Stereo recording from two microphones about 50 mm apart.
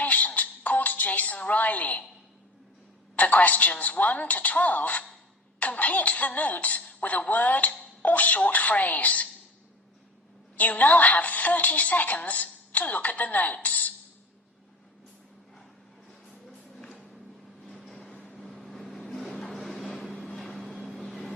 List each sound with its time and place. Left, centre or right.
0.0 s music: left
3.2 s a woman's voice: left
10.6 s a woman's voice: left
16.5 s music: centre
17.6 s a sound: centre
18.3 s vehicle: centre